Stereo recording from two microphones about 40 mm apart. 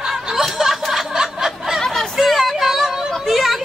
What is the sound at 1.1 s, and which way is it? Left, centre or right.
Snicker, centre.